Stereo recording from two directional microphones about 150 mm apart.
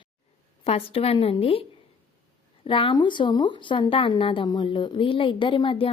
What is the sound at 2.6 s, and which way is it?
A woman's voice, 35° left (ahead or behind).